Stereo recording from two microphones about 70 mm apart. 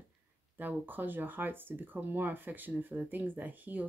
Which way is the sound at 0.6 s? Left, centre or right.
Right.